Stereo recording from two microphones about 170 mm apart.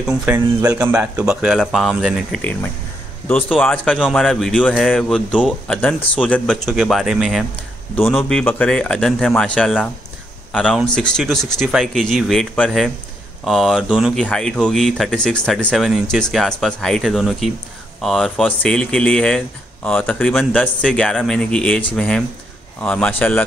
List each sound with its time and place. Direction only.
0.0 s a man's voice: 5° right (ahead or behind)
0.6 s a man's voice: 20° right (ahead or behind)
0.9 s speech: 5° right (ahead or behind); by 23.4 s 10° left (ahead or behind)